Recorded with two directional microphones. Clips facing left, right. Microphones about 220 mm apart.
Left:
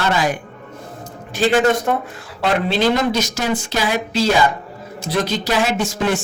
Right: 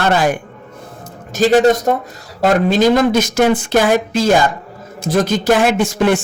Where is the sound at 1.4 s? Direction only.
40° right (ahead or behind).